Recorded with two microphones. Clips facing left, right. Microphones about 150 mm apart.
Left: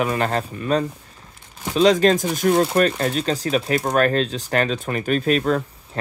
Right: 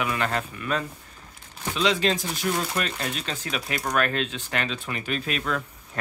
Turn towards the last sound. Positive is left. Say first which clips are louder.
# left 7 dB
turn(degrees=35)  # may be behind; listen again after turning